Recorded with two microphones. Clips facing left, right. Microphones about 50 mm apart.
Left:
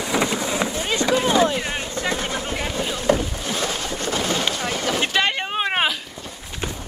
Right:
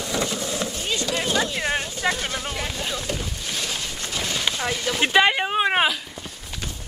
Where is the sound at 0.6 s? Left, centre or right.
Left.